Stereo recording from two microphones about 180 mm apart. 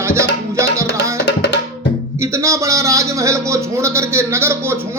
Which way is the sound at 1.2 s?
75° left (ahead or behind).